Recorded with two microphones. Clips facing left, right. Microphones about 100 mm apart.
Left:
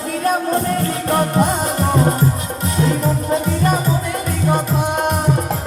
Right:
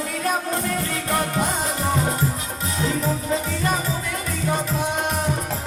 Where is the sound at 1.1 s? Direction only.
45° left (ahead or behind).